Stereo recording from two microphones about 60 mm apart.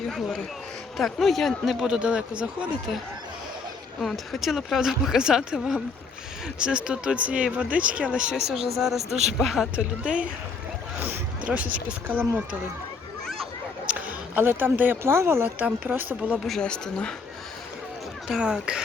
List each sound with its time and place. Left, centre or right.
0.1 s speech: centre
2.0 s speech: centre
4.0 s speech: centre
9.7 s speech: centre
13.8 s speech: right
15.5 s speech: right
16.5 s speech: centre
18.3 s speech: centre